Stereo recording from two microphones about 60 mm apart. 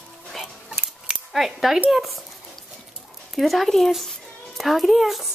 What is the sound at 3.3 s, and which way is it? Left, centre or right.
Speech, centre.